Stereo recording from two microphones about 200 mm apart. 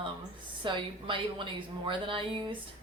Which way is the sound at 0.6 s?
25° right (ahead or behind).